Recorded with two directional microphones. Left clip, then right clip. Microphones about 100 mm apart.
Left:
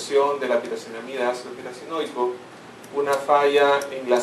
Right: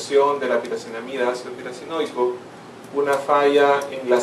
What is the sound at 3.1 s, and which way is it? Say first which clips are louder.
Speech: right 1 dB; 5° left (ahead or behind).